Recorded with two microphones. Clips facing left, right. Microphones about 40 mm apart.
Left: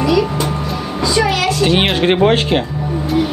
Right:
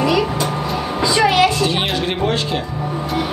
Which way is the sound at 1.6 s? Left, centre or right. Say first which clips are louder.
Left 5 dB; left.